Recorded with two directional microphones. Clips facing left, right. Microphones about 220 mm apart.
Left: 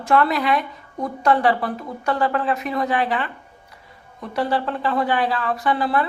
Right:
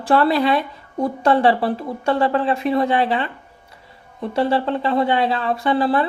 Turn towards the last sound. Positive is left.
turn(degrees=-30)  # may be behind; listen again after turning